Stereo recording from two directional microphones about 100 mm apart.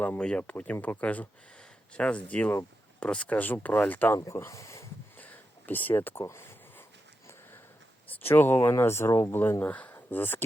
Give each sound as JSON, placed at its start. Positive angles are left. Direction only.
{"t": 0.2, "sound": "speech", "side_deg": 10}
{"t": 4.3, "sound": "speech", "side_deg": 30}
{"t": 5.1, "sound": "a sound", "side_deg": 15}
{"t": 8.0, "sound": "speech", "side_deg": 20}